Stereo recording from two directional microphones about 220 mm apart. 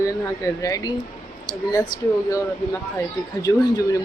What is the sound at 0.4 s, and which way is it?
Speech, 15° left (ahead or behind).